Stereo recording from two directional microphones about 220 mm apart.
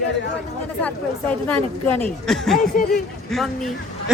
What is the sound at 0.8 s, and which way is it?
Speech, 5° left (ahead or behind).